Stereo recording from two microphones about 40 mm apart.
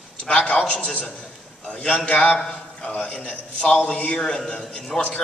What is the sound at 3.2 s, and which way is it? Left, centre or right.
A man's voice, centre.